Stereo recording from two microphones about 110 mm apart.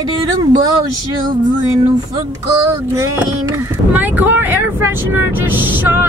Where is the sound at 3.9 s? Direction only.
15° right (ahead or behind).